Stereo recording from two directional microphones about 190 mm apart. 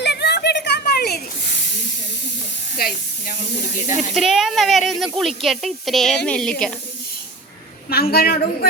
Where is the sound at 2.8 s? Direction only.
50° left (ahead or behind).